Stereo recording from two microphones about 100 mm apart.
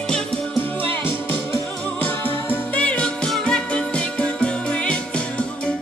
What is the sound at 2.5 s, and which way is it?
Music, 15° left (ahead or behind).